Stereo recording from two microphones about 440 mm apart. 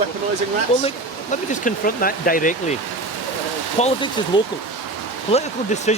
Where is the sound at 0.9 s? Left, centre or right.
Centre.